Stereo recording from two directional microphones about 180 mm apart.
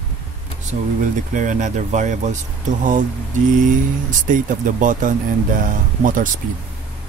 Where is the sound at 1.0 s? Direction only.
45° right (ahead or behind).